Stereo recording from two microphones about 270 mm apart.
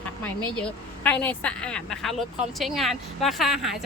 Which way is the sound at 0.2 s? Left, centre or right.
Centre.